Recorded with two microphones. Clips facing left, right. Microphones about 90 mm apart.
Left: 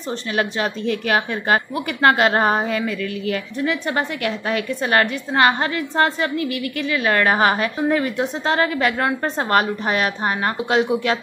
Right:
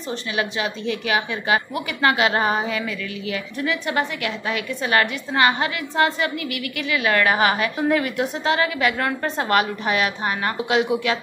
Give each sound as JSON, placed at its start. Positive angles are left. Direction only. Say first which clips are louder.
{"t": 0.4, "sound": "a woman's voice", "louder": "left 3 dB", "side_deg": 45}